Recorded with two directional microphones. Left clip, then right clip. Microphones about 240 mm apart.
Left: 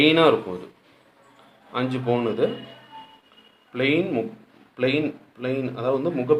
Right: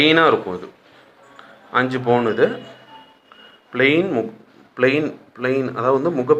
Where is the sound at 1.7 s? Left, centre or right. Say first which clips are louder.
Right 7 dB; centre.